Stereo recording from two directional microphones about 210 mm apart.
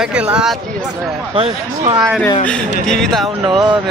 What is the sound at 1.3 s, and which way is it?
Speech, 25° right (ahead or behind).